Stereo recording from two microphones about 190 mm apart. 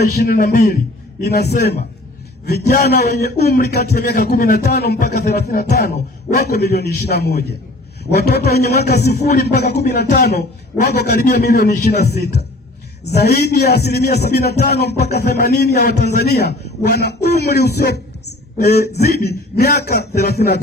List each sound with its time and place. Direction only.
0.0 s a man's voice: 55° left (ahead or behind)
1.2 s speech: 60° left (ahead or behind)